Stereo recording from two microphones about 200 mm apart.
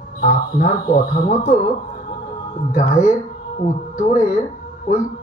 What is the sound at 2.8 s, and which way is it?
Speech, 35° left (ahead or behind).